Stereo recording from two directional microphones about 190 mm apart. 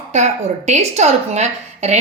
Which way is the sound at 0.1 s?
35° right (ahead or behind).